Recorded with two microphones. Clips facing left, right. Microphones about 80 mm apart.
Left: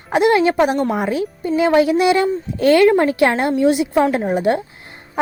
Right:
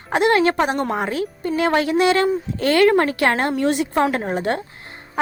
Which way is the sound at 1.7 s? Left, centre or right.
Right.